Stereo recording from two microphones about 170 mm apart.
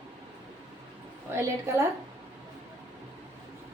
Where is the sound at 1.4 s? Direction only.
15° right (ahead or behind).